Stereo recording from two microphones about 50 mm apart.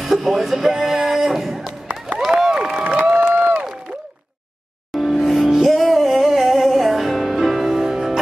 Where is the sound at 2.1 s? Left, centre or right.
Centre.